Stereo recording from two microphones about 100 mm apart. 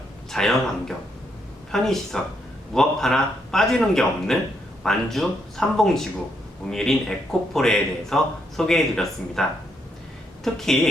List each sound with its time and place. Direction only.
0.3 s speech: 5° left (ahead or behind)